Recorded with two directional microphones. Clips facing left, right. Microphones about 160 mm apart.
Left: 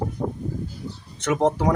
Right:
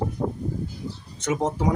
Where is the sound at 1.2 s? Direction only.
65° left (ahead or behind).